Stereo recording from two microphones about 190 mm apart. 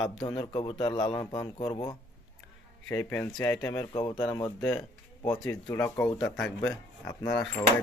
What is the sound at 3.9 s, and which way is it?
Speech, 25° left (ahead or behind).